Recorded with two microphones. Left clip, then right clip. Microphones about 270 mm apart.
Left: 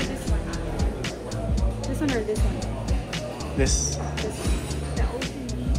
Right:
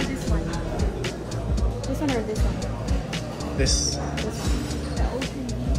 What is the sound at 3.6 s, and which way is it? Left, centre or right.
Speech, right.